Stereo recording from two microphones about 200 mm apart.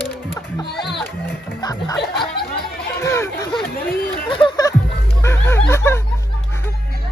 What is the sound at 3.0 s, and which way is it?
Chatter, 15° left (ahead or behind).